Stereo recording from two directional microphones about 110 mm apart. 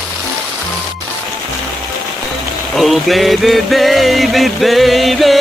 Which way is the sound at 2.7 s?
Centre (ahead or behind).